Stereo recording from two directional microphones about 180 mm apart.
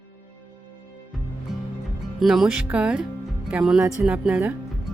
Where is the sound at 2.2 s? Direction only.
Centre (ahead or behind).